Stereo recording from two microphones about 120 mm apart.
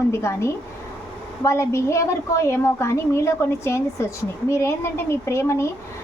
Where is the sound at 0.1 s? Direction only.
25° left (ahead or behind).